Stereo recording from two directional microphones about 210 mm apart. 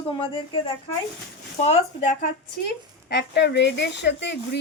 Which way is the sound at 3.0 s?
55° left (ahead or behind).